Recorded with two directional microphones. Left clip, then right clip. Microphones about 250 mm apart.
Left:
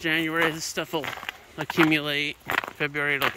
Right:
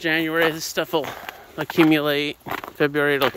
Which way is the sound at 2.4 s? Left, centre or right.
Centre.